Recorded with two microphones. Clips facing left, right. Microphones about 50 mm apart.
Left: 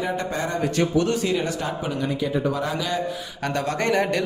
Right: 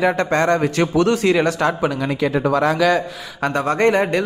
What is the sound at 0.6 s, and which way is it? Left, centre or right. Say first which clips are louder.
Speech: right 4 dB; right.